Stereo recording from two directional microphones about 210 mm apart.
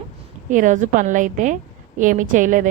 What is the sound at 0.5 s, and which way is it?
A woman's voice, 35° right (ahead or behind).